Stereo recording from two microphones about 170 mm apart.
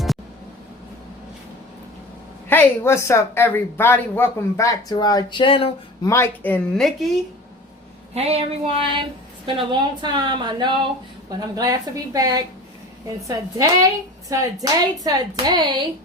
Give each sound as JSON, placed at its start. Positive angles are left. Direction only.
{"t": 2.5, "sound": "speech", "side_deg": 15}
{"t": 6.1, "sound": "speech", "side_deg": 15}
{"t": 8.1, "sound": "a sound", "side_deg": -35}
{"t": 9.6, "sound": "a woman's voice", "side_deg": -25}